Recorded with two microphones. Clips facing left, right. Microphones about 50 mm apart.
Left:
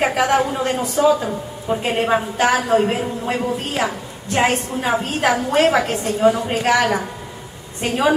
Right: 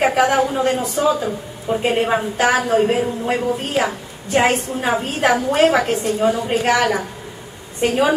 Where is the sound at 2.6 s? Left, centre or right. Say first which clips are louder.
Even; centre.